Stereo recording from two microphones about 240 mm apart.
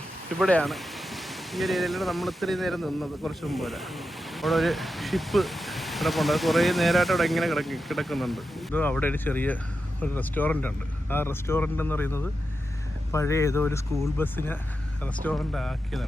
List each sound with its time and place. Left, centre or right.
0.3 s speech: centre